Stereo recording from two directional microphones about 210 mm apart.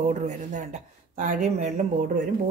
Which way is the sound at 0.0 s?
35° right (ahead or behind).